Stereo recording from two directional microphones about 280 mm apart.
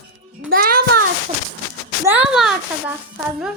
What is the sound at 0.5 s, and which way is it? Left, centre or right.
Speech, right.